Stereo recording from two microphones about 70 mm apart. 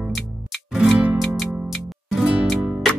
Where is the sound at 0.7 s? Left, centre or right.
Centre.